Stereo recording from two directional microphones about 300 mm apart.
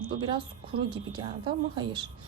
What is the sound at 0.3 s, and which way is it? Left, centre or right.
A woman's voice, centre.